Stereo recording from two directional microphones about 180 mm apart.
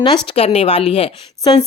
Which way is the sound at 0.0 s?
30° left (ahead or behind).